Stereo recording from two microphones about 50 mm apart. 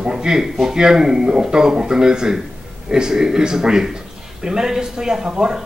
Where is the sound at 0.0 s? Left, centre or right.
Centre.